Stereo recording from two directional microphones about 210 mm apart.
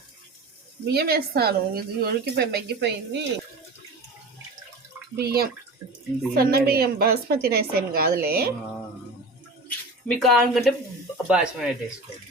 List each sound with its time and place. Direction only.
0.9 s speech: 50° right (ahead or behind)
5.1 s speech: 50° right (ahead or behind)
5.8 s speech: 25° right (ahead or behind)
6.3 s speech: 45° right (ahead or behind)
9.6 s speech: centre (ahead or behind)